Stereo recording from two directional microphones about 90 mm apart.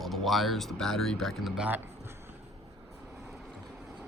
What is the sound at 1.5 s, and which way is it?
Speech, 15° right (ahead or behind).